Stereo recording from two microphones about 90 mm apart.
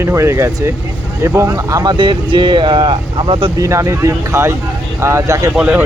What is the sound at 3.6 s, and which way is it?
Speech, 35° right (ahead or behind).